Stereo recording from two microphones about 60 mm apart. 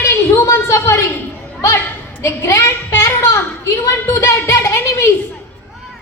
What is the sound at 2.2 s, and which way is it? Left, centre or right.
A woman's voice, left.